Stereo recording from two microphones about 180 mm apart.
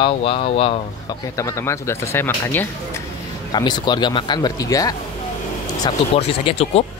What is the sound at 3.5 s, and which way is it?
A man's voice, 25° left (ahead or behind).